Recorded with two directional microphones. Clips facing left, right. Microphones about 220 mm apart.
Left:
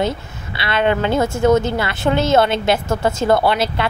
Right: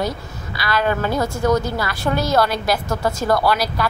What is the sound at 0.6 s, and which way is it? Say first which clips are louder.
A woman's voice: left 3 dB; 25° left (ahead or behind).